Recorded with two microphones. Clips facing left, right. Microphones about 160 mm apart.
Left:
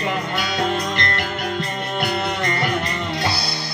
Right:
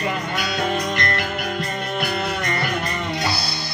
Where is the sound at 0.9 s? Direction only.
30° left (ahead or behind).